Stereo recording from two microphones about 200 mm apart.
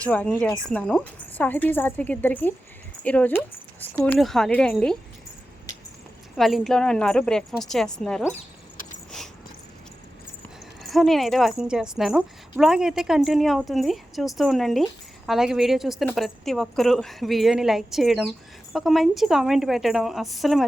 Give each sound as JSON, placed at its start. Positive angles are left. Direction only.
{"t": 0.0, "sound": "a woman's voice", "side_deg": 5}
{"t": 6.3, "sound": "a woman's voice", "side_deg": 0}
{"t": 8.4, "sound": "keys jangling", "side_deg": 40}
{"t": 10.8, "sound": "a woman's voice", "side_deg": 0}